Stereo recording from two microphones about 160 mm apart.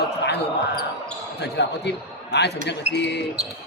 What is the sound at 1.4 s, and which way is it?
A man's voice, 90° left.